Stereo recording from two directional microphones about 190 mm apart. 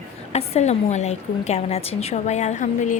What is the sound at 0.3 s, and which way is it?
A woman's voice, 35° left (ahead or behind).